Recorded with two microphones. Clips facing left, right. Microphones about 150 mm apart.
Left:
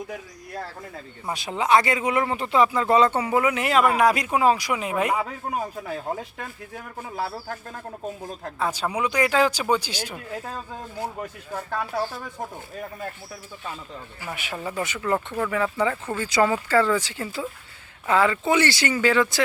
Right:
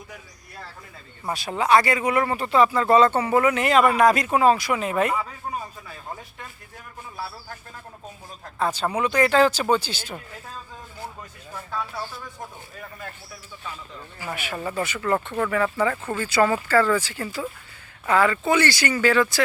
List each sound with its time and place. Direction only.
1.3 s speech: 20° left (ahead or behind)
5.2 s a man's voice: 65° left (ahead or behind)
8.5 s speech: 10° left (ahead or behind)
10.3 s a man's voice: 60° left (ahead or behind)
14.3 s speech: 15° left (ahead or behind)